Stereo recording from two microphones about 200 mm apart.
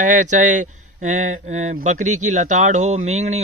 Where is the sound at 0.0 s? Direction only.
40° right (ahead or behind).